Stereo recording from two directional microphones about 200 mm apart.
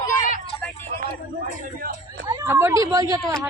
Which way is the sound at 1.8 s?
45° right (ahead or behind).